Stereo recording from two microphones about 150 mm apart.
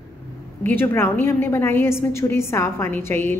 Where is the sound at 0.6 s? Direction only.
15° left (ahead or behind).